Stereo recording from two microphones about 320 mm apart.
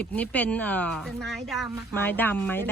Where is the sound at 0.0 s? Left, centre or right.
Centre.